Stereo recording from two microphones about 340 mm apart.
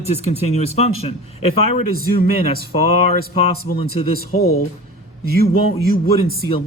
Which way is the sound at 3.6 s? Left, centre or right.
Left.